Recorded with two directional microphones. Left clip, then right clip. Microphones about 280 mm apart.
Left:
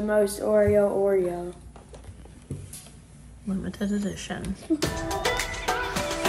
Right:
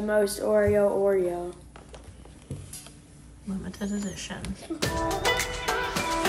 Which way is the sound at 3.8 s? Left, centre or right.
Left.